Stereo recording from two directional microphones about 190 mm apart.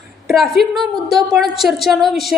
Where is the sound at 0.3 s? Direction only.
Centre (ahead or behind).